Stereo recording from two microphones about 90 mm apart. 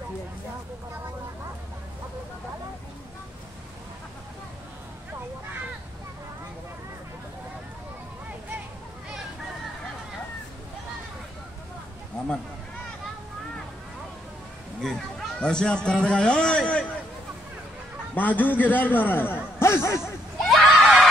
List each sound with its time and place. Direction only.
14.8 s a man's voice: 5° left (ahead or behind)
18.1 s a man's voice: 20° left (ahead or behind)
20.0 s a sound: centre (ahead or behind)